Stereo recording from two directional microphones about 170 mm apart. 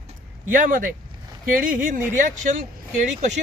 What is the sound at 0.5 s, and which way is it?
Speech, 55° right (ahead or behind).